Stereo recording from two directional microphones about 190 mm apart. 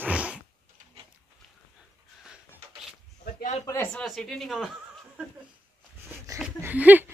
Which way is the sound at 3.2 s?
40° left (ahead or behind).